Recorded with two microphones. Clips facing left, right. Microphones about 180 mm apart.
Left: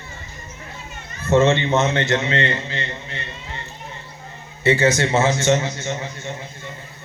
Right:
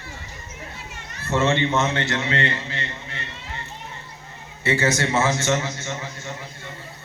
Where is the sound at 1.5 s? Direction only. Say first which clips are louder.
Left 3 dB; 20° left (ahead or behind).